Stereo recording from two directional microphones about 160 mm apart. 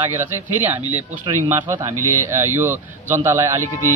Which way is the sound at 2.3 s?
15° right (ahead or behind).